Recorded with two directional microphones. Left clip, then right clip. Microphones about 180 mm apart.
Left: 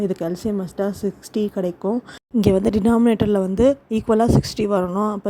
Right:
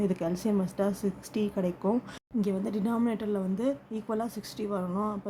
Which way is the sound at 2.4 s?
50° left (ahead or behind).